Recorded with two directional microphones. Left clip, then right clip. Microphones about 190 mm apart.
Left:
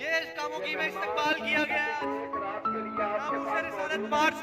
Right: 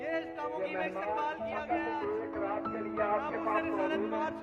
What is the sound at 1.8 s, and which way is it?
Speech, 5° left (ahead or behind).